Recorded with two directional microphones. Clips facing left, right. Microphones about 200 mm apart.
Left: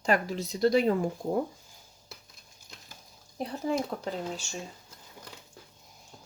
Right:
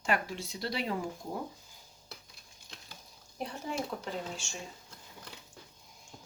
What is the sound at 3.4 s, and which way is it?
Speech, 35° left (ahead or behind).